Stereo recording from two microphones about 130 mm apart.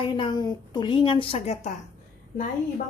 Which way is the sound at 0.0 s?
40° left (ahead or behind).